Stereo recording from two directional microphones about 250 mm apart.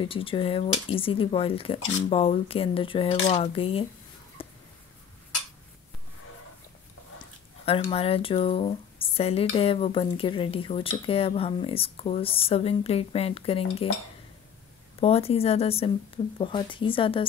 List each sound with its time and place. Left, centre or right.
0.0 s speech: left
4.4 s a sound: left
7.6 s speech: left
15.0 s speech: left